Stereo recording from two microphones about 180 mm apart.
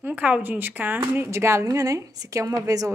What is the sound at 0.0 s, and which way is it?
Speech, 10° right (ahead or behind).